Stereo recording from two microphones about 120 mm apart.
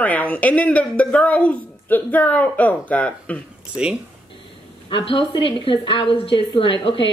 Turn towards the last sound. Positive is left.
turn(degrees=45)  # may be behind; listen again after turning